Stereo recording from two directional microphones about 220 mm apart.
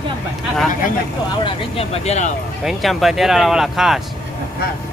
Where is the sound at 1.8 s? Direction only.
30° left (ahead or behind).